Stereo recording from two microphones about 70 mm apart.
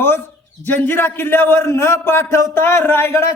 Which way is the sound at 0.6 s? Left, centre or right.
Left.